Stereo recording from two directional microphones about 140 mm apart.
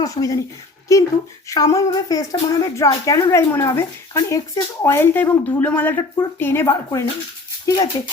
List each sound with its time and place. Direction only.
0.0 s speech: 25° left (ahead or behind)